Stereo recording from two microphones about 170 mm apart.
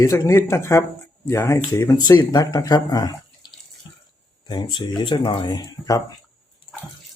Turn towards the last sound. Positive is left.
turn(degrees=20)  # may be behind; listen again after turning